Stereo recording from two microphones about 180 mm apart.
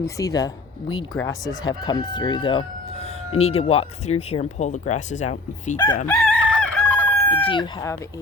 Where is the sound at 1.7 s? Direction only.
20° left (ahead or behind); by 5.8 s 40° left (ahead or behind).